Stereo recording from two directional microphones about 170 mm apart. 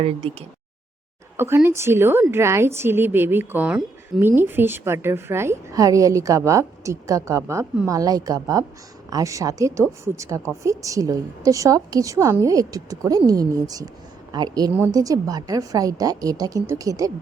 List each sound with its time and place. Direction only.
0.0 s speech: 35° right (ahead or behind)
1.4 s a woman's voice: 15° right (ahead or behind)